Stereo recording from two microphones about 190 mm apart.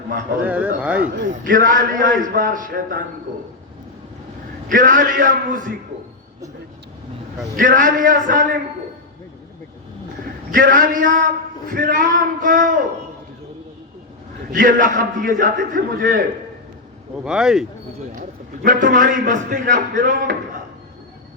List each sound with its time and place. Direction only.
0.4 s speech: 10° right (ahead or behind)
1.3 s a man's voice: 45° right (ahead or behind)
4.7 s a man's voice: 45° right (ahead or behind)
7.5 s a man's voice: 45° right (ahead or behind)
10.5 s a man's voice: 45° right (ahead or behind)
14.5 s a man's voice: 45° right (ahead or behind)
17.2 s speech: 5° right (ahead or behind)
18.1 s a man's voice: 45° right (ahead or behind)